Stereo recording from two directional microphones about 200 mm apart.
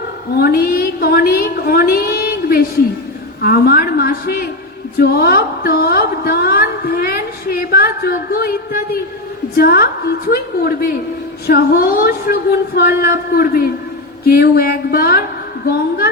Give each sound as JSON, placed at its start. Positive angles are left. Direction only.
{"t": 0.3, "sound": "a woman's voice", "side_deg": 50}